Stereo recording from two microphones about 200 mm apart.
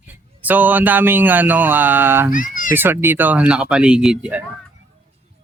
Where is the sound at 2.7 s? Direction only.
10° right (ahead or behind).